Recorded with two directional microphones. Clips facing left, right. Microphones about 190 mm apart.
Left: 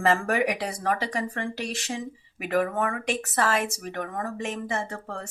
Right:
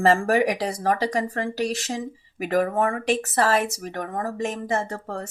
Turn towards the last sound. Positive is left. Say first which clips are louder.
# right 4 dB
turn(degrees=-40)  # may be behind; listen again after turning